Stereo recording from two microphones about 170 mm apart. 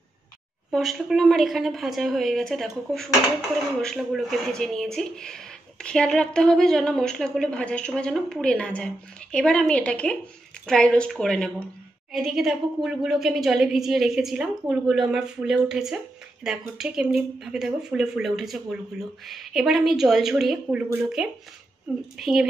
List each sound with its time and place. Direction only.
0.7 s speech: centre (ahead or behind)